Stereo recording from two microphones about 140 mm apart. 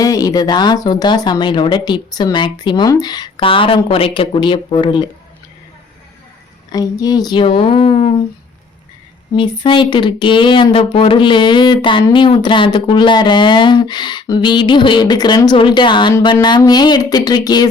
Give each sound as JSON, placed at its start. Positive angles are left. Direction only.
{"t": 0.0, "sound": "speech", "side_deg": 25}
{"t": 6.7, "sound": "speech", "side_deg": 25}
{"t": 7.4, "sound": "speech", "side_deg": 40}
{"t": 9.3, "sound": "speech", "side_deg": 35}